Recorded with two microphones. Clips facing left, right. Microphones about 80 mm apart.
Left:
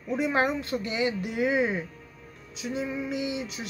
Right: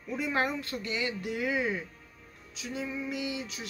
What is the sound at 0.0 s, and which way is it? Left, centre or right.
Speech, left.